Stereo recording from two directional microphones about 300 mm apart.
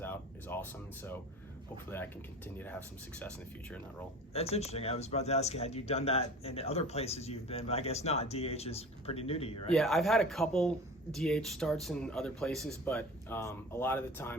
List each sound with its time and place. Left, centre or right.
0.0 s a sound: centre
1.9 s speech: centre
3.2 s speech: centre
4.4 s speech: left
9.7 s speech: centre